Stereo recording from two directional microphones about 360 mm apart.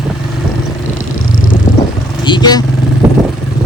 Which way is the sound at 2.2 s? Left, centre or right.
Centre.